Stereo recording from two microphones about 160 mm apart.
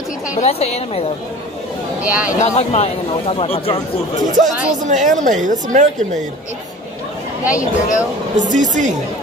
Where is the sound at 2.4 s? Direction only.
45° left (ahead or behind).